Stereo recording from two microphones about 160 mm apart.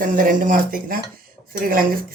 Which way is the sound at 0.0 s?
55° right (ahead or behind).